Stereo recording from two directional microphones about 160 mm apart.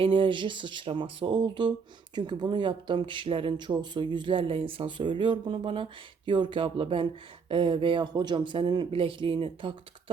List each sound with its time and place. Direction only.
0.0 s speech: 30° right (ahead or behind)